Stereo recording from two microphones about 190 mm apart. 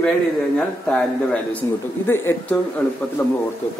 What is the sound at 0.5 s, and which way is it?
Speech, 5° left (ahead or behind).